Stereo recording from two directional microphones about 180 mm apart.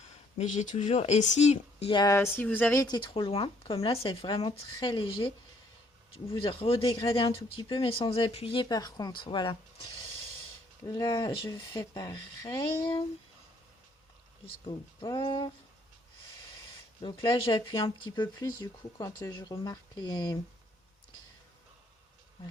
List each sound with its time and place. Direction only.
0.3 s speech: 40° left (ahead or behind)
1.9 s speech: 20° left (ahead or behind)
2.8 s speech: 25° left (ahead or behind)
6.3 s speech: 30° left (ahead or behind)
10.8 s speech: 20° left (ahead or behind)
14.7 s speech: 25° left (ahead or behind)
17.0 s speech: 25° left (ahead or behind)